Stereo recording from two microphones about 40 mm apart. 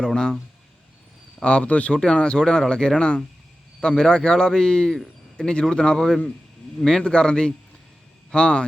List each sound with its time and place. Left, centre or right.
0.0 s a man's voice: centre
1.4 s a man's voice: left
2.1 s a man's voice: left
7.0 s a man's voice: left